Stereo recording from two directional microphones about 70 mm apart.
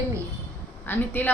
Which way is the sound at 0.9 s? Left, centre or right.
Left.